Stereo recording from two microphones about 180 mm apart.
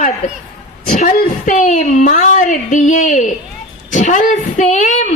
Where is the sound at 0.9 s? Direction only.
45° left (ahead or behind).